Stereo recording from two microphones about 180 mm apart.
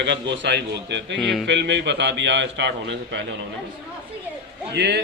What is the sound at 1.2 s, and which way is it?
Speech, centre (ahead or behind).